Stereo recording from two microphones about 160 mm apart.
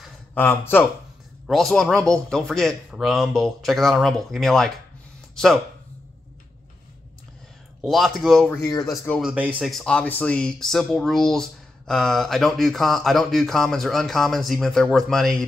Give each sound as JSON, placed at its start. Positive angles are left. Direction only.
{"t": 0.0, "sound": "a sound", "side_deg": 10}
{"t": 1.5, "sound": "speech", "side_deg": 0}
{"t": 7.8, "sound": "speech", "side_deg": 0}